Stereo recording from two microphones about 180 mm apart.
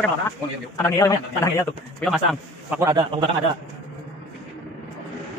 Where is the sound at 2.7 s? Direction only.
15° right (ahead or behind).